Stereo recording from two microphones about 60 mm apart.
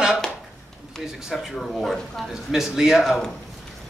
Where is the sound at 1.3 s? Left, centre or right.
Centre.